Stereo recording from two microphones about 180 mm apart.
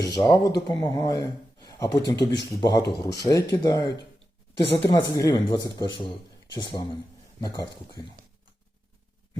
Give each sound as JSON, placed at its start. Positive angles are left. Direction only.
{"t": 0.1, "sound": "speech", "side_deg": 20}
{"t": 2.1, "sound": "speech", "side_deg": 75}
{"t": 2.6, "sound": "speech", "side_deg": 25}